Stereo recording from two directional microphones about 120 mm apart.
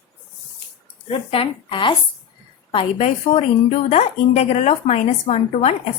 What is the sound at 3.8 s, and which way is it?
A woman's voice, 65° left (ahead or behind).